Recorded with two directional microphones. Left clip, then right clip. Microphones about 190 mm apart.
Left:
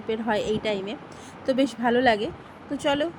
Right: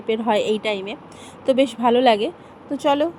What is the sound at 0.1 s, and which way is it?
A woman's voice, 20° right (ahead or behind).